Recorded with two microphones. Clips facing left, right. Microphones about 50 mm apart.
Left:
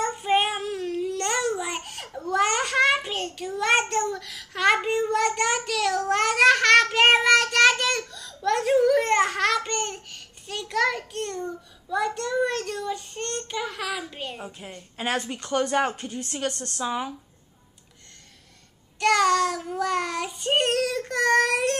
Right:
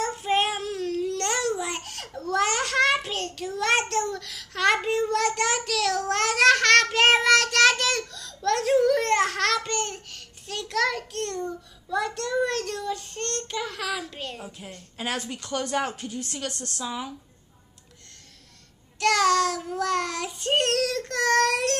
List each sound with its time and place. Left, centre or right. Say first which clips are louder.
0.0 s child singing: left 1 dB; centre
15.9 s speech: left 1 dB; centre
18.9 s child singing: left 1 dB; centre